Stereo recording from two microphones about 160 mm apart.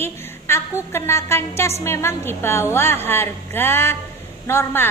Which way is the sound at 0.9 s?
15° left (ahead or behind).